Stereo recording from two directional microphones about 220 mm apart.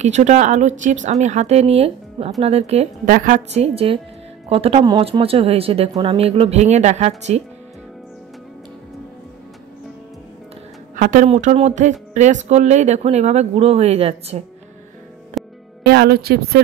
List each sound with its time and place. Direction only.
0.0 s speech: 30° right (ahead or behind)
3.1 s speech: 40° right (ahead or behind)
11.0 s speech: 35° right (ahead or behind)
15.4 s music: centre (ahead or behind)
15.8 s a woman's voice: 45° right (ahead or behind)